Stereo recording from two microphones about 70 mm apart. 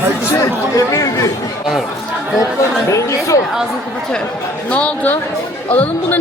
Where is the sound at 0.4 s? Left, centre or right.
Left.